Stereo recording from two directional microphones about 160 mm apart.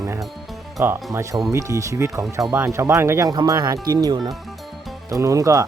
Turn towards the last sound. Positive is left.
turn(degrees=-20)  # may be behind; listen again after turning